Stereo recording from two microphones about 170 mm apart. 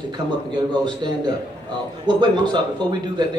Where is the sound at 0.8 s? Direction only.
25° right (ahead or behind).